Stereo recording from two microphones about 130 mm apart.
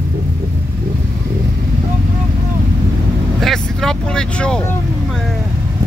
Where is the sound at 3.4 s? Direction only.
5° left (ahead or behind).